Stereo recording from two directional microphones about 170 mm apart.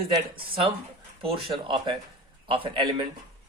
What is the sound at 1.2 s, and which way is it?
Speech, 35° right (ahead or behind).